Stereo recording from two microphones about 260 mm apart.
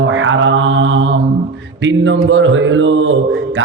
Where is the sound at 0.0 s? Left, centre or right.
Right.